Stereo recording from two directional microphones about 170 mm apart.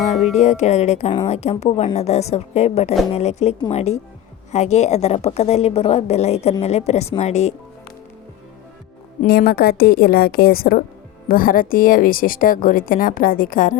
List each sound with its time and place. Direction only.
0.3 s a woman's voice: 40° left (ahead or behind)
9.2 s a woman's voice: 65° left (ahead or behind)